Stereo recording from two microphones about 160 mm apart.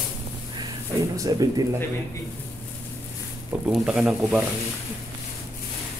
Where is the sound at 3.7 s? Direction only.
Centre (ahead or behind).